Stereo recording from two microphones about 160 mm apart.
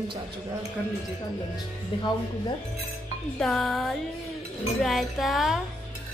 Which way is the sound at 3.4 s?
Centre (ahead or behind).